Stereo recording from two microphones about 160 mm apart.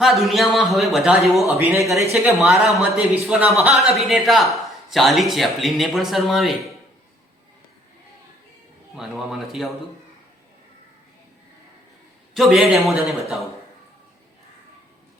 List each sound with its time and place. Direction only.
0.0 s a man's voice: centre (ahead or behind)
1.5 s speech: 15° right (ahead or behind)
1.8 s a man's voice: centre (ahead or behind)
9.0 s a man's voice: centre (ahead or behind)
12.3 s a man's voice: centre (ahead or behind)